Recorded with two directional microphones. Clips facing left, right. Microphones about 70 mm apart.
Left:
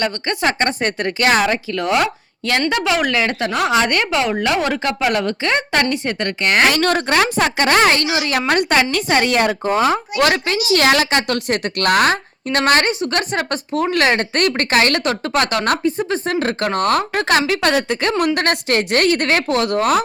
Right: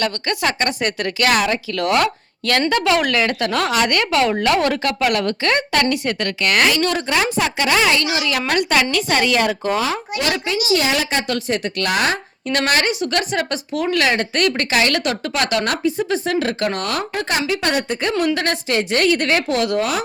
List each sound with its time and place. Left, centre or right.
0.0 s speech: left
6.7 s a woman's voice: left
10.2 s a woman's voice: left
11.3 s a woman's voice: left
17.2 s a woman's voice: left
18.3 s a woman's voice: left